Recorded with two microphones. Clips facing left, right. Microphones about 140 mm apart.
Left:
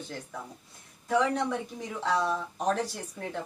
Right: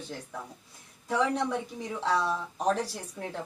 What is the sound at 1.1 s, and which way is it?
A woman's voice, centre (ahead or behind).